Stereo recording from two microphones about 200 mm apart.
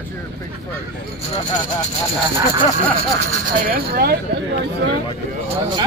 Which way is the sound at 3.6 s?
50° right (ahead or behind).